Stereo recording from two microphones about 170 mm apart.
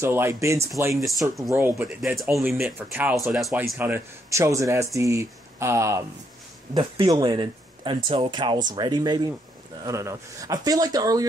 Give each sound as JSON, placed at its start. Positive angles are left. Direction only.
{"t": 0.0, "sound": "speech", "side_deg": -15}
{"t": 2.0, "sound": "speech", "side_deg": 0}
{"t": 6.7, "sound": "speech", "side_deg": -25}